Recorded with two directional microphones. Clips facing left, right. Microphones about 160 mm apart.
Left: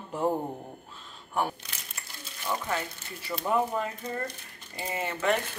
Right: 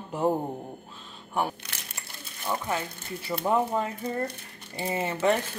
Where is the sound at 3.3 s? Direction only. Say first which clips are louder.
Right 3 dB; 15° right (ahead or behind).